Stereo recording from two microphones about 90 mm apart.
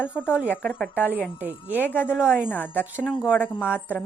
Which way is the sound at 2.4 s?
20° left (ahead or behind).